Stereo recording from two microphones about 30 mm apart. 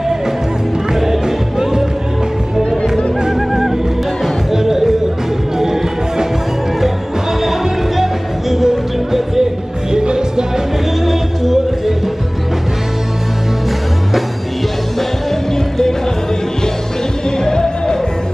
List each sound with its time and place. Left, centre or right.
0.9 s music: centre
3.3 s music: centre
8.0 s music: centre
11.1 s music: centre
17.5 s music: left